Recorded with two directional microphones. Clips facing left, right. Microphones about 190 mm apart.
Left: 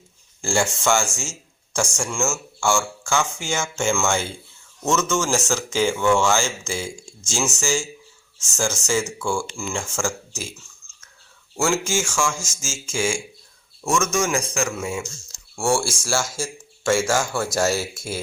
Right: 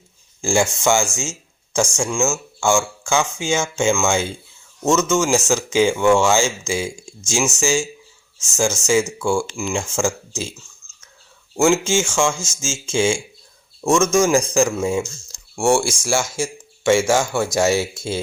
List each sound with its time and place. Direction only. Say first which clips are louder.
0.4 s speech: right 4 dB; 15° right (ahead or behind)
10.8 s whispering: even; 20° right (ahead or behind)
11.5 s speech: right 6 dB; 20° right (ahead or behind)
16.3 s a sound: right 5 dB; 20° right (ahead or behind)
17.1 s speech: right 4 dB; 20° right (ahead or behind)